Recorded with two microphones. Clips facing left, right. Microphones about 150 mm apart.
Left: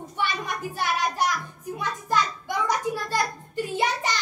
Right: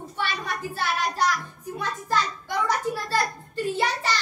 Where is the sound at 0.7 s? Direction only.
15° left (ahead or behind).